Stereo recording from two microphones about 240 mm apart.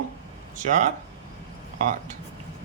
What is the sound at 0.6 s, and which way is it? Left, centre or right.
Speech, right.